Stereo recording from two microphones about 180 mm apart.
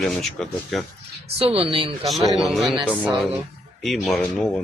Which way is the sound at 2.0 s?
Centre (ahead or behind).